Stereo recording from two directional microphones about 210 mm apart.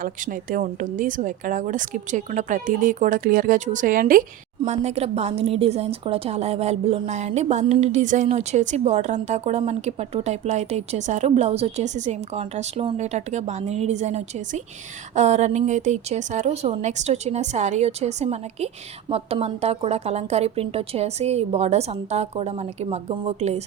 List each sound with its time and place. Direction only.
0.0 s speech: 40° right (ahead or behind)